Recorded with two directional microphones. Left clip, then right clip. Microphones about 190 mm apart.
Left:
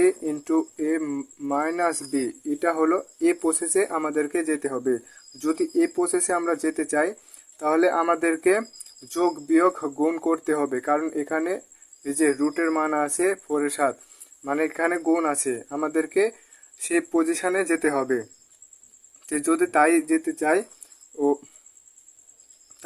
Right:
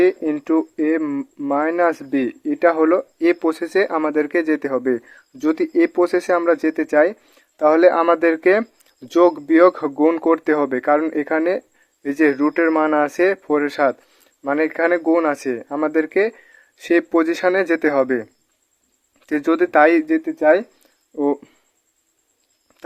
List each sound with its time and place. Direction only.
0.0 s speech: 40° right (ahead or behind)